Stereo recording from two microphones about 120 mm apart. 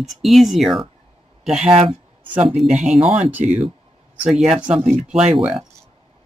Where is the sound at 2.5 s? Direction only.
Centre (ahead or behind).